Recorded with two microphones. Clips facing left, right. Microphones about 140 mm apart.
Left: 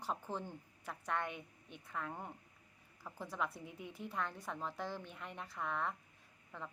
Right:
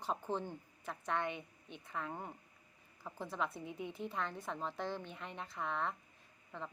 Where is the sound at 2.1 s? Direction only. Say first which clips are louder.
Right 1 dB; 10° right (ahead or behind).